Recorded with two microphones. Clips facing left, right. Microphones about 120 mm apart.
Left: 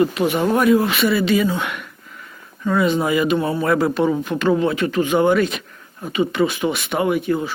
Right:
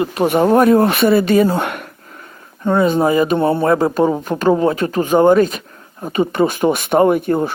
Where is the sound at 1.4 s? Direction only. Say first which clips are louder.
Right 4 dB; 50° right (ahead or behind).